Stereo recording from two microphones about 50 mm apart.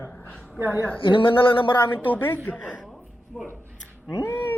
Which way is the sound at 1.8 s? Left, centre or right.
Left.